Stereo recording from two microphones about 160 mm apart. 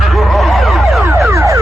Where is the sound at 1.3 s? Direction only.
20° right (ahead or behind).